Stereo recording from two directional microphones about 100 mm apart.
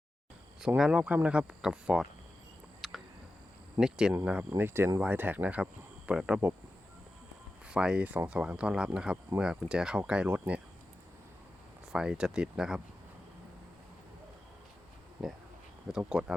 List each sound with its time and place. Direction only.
0.8 s speech: 10° right (ahead or behind)
2.8 s a sound: centre (ahead or behind)
3.8 s speech: 5° right (ahead or behind)
4.3 s speech: 20° right (ahead or behind)
7.7 s speech: 10° right (ahead or behind)
11.9 s speech: 5° right (ahead or behind)
15.2 s speech: 5° right (ahead or behind)